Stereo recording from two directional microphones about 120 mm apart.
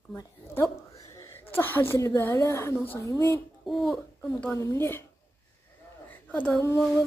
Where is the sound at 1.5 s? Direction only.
20° left (ahead or behind).